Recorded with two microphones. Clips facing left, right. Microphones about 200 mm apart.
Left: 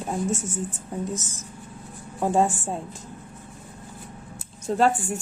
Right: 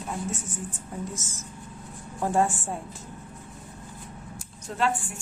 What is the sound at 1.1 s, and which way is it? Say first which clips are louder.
A woman's voice: left 4 dB; 15° left (ahead or behind).